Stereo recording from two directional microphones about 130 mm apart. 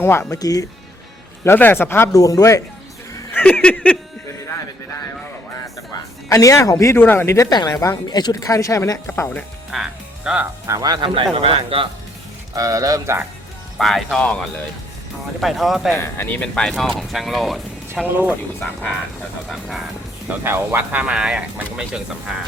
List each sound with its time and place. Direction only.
0.0 s speech: 20° left (ahead or behind)
1.5 s speech: 15° left (ahead or behind)
3.3 s a sound: 10° left (ahead or behind)
5.5 s speech: 25° left (ahead or behind)
9.7 s music: 5° right (ahead or behind)
10.7 s speech: 30° right (ahead or behind)
11.1 s speech: 45° right (ahead or behind)
12.5 s speech: 25° right (ahead or behind)
13.7 s speech: centre (ahead or behind)
15.4 s speech: centre (ahead or behind)
16.0 s speech: 15° left (ahead or behind); by 18.0 s centre (ahead or behind)
19.5 s speech: centre (ahead or behind)
20.4 s speech: 20° right (ahead or behind)